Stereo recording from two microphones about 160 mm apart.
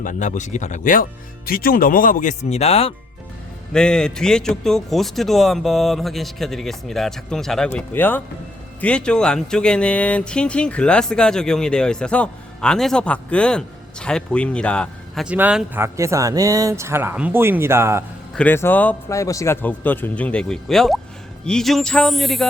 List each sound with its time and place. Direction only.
0.0 s speech: 55° left (ahead or behind)
1.5 s speech: 65° left (ahead or behind); by 2.9 s 40° left (ahead or behind)
3.7 s speech: 5° left (ahead or behind); by 18.0 s 15° right (ahead or behind)
18.3 s speech: 10° left (ahead or behind)